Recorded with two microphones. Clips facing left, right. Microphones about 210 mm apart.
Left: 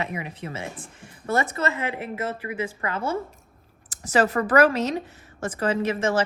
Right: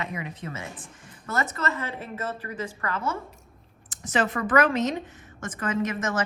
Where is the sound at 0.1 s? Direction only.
25° left (ahead or behind).